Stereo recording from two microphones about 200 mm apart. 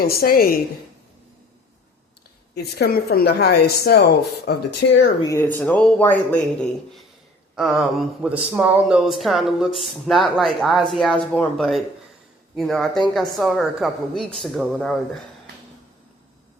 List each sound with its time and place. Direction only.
0.0 s speech: 50° left (ahead or behind)
2.6 s speech: 50° left (ahead or behind)
5.2 s speech: 10° left (ahead or behind)
7.5 s speech: centre (ahead or behind)